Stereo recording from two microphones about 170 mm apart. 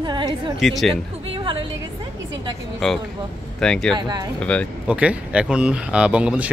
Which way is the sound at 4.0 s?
25° right (ahead or behind).